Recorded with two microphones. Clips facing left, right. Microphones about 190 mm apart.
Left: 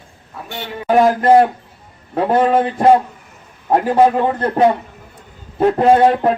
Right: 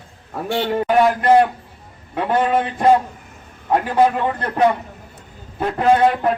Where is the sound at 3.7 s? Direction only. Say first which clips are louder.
Left 3 dB; 35° left (ahead or behind).